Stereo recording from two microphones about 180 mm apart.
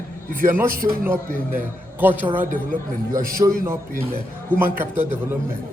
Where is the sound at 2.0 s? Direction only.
10° right (ahead or behind).